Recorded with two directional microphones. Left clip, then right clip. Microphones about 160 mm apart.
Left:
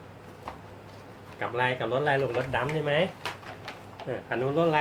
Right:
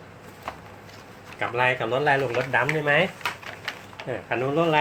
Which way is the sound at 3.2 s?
10° left (ahead or behind).